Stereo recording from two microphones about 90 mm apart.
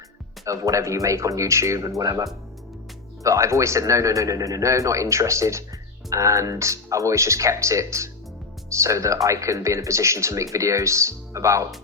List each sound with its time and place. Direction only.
0.4 s speech: 35° right (ahead or behind)